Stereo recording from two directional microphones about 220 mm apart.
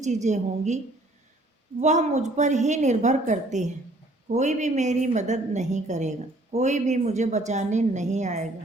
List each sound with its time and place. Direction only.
0.0 s a woman's voice: 30° right (ahead or behind)
1.8 s a woman's voice: 30° right (ahead or behind)